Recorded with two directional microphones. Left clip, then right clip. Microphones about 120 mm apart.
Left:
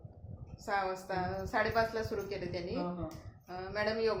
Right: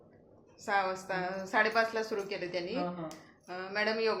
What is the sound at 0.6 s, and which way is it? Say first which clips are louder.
A woman's voice: right 3 dB; 25° right (ahead or behind).